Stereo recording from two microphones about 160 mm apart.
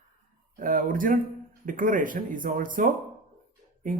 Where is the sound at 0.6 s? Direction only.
60° right (ahead or behind).